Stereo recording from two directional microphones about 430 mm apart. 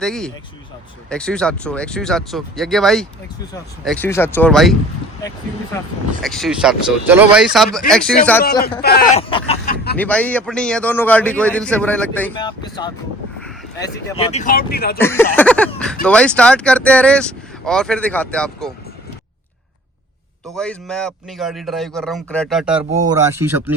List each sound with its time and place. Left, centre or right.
0.0 s a man's voice: centre
6.2 s a man's voice: centre
8.8 s speech: left
10.0 s a man's voice: centre; by 14.9 s left
14.9 s a man's voice: centre
20.5 s a man's voice: centre